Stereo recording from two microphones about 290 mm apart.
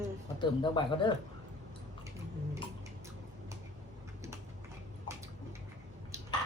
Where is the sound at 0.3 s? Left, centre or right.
Centre.